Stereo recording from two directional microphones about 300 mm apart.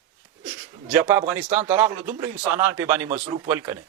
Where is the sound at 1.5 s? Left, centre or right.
Right.